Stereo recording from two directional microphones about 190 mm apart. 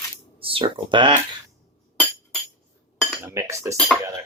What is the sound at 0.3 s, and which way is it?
Speech, 30° right (ahead or behind).